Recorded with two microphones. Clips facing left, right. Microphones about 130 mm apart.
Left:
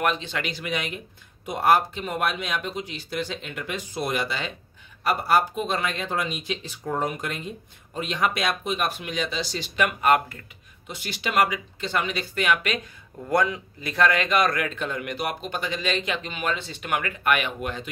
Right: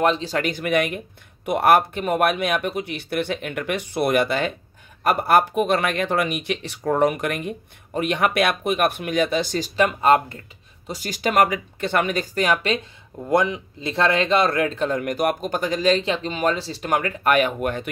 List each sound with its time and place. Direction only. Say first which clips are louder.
0.0 s speech: right 6 dB; 35° right (ahead or behind); by 9.7 s 50° right (ahead or behind)
9.8 s speech: right 4 dB; 30° right (ahead or behind)
10.9 s speech: right 6 dB; 40° right (ahead or behind)